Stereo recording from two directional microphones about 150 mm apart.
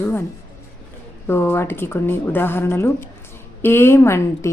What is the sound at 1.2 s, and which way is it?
A woman's voice, 15° left (ahead or behind).